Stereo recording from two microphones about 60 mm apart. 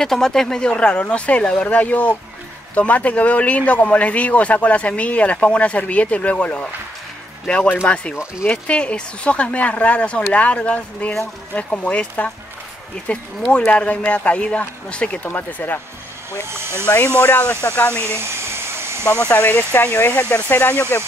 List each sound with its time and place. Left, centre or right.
0.0 s a man's voice: centre; by 15.8 s left
17.2 s a man's voice: left
18.0 s hair dryer: right
19.0 s a man's voice: left